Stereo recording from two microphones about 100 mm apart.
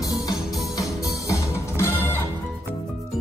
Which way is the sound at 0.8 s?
35° left (ahead or behind).